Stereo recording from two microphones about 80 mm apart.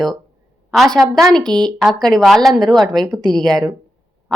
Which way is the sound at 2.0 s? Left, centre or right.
Centre.